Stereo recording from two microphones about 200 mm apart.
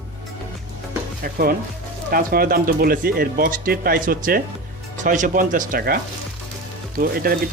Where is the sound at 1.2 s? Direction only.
50° right (ahead or behind).